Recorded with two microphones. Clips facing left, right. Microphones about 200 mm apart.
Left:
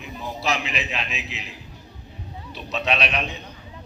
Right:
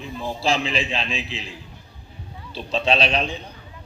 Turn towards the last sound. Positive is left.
turn(degrees=-30)  # may be behind; listen again after turning